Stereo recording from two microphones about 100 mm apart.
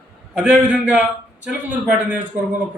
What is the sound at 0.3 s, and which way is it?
A man's voice, 15° right (ahead or behind).